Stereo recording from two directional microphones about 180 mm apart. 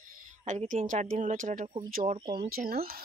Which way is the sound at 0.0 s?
45° right (ahead or behind).